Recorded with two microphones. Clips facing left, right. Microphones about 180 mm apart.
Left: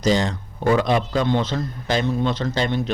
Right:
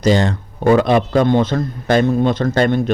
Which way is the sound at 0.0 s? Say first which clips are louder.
Right 5 dB; 60° right (ahead or behind).